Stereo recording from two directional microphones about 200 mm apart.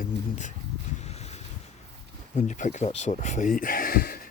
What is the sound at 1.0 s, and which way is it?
Boat, 35° left (ahead or behind).